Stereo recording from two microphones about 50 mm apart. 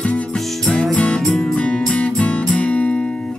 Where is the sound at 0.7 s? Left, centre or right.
Left.